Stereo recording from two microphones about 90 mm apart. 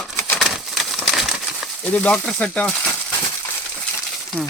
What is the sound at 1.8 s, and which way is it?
Speech, 15° left (ahead or behind).